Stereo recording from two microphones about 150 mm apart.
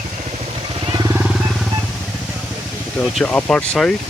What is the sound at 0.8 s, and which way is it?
Vehicle, 25° right (ahead or behind).